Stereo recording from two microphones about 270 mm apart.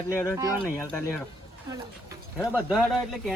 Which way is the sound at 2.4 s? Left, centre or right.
Centre.